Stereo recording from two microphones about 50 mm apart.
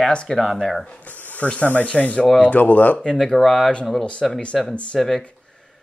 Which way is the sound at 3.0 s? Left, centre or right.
Centre.